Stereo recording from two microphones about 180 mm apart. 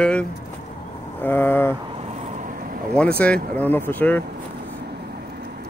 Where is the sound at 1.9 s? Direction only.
35° right (ahead or behind).